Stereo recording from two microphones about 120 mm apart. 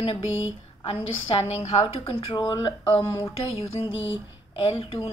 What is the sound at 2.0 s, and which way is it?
Speech, 50° left (ahead or behind).